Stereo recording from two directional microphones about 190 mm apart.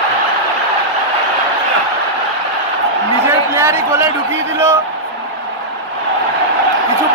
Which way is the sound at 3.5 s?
15° right (ahead or behind).